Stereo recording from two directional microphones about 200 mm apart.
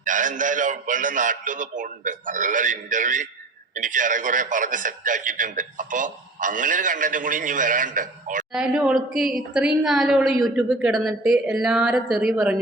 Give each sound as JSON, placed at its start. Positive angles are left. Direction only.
{"t": 0.0, "sound": "a man's voice", "side_deg": -40}
{"t": 8.5, "sound": "a woman's voice", "side_deg": -5}